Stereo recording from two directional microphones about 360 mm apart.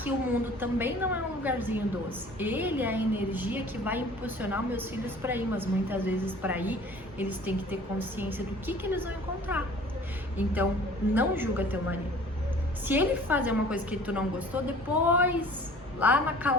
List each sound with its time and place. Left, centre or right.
0.6 s a woman's voice: centre